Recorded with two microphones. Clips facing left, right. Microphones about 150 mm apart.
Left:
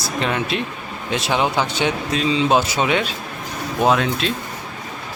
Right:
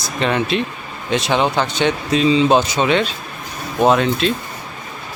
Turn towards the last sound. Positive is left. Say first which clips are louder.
# right 3 dB
turn(degrees=0)  # may be behind; listen again after turning